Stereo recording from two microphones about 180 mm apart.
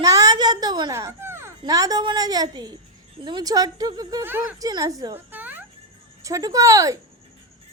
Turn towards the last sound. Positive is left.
turn(degrees=-20)  # may be behind; listen again after turning